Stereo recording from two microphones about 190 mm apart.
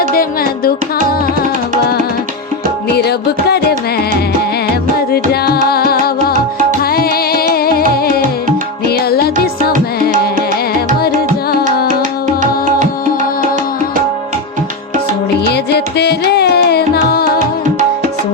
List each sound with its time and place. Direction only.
0.1 s music: 50° left (ahead or behind)
2.9 s music: 60° left (ahead or behind)
9.7 s music: 45° right (ahead or behind)
15.5 s music: 60° left (ahead or behind)